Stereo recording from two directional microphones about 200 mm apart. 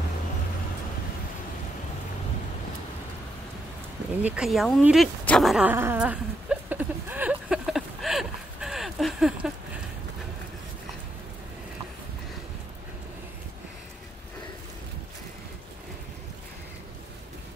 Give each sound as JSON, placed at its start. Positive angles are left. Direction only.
{"t": 4.2, "sound": "dog", "side_deg": -5}